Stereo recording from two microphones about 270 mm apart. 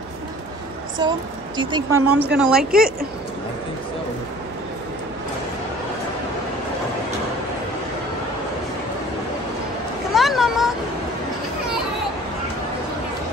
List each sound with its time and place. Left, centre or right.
1.0 s a woman's voice: centre
2.3 s speech: centre
10.1 s cat: centre